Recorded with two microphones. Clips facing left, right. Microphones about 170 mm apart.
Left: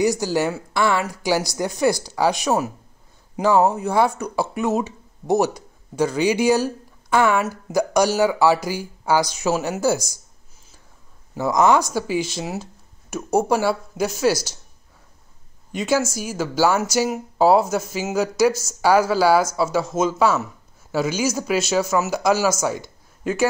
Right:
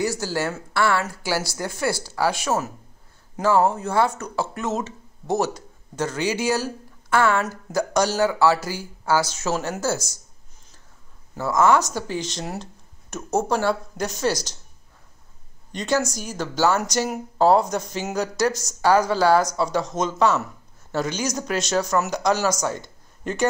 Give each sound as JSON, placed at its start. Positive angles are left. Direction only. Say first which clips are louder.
{"t": 0.0, "sound": "speech", "louder": "left 5 dB", "side_deg": 15}
{"t": 11.3, "sound": "speech", "louder": "left 2 dB", "side_deg": 15}
{"t": 15.7, "sound": "speech", "louder": "left 2 dB", "side_deg": 5}